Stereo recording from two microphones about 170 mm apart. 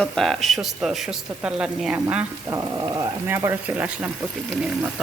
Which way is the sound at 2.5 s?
20° right (ahead or behind).